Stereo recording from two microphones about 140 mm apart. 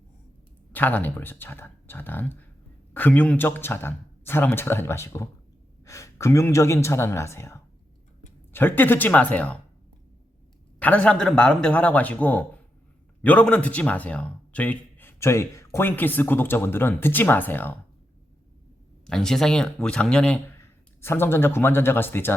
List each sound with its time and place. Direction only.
0.7 s a man's voice: 15° left (ahead or behind)
10.8 s a man's voice: 10° left (ahead or behind)
19.0 s speech: 5° left (ahead or behind)
20.6 s speech: 15° left (ahead or behind)